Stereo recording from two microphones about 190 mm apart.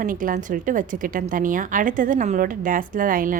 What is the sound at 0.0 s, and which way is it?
A woman's voice, 45° right (ahead or behind).